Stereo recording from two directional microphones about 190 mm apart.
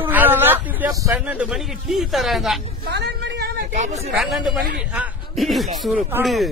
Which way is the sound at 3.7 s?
40° right (ahead or behind).